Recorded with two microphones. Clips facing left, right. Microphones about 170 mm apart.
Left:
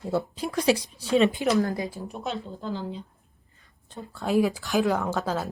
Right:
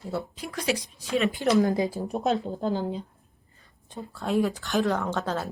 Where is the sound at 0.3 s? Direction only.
30° left (ahead or behind).